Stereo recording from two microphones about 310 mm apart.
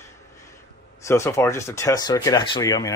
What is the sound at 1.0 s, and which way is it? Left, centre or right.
A man's voice, centre.